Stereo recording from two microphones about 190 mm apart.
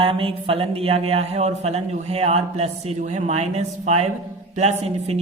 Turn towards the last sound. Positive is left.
turn(degrees=-35)  # may be behind; listen again after turning